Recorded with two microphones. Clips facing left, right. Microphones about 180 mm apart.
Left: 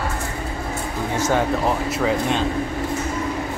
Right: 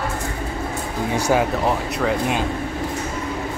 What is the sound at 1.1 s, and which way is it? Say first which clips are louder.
Speech: right 2 dB; 15° right (ahead or behind).